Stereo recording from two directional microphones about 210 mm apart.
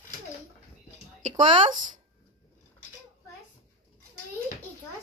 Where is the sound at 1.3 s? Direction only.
25° right (ahead or behind).